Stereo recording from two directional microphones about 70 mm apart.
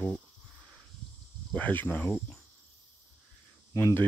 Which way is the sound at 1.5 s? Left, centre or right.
Left.